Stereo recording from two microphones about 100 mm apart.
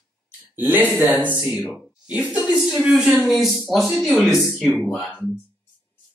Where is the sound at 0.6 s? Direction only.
20° right (ahead or behind).